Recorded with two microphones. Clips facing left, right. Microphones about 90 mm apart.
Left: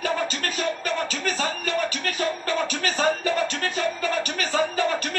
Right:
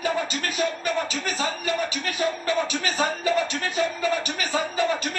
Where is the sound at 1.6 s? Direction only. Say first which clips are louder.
Left 1 dB; 45° left (ahead or behind).